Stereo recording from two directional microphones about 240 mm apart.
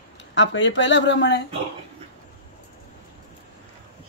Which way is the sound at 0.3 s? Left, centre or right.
Left.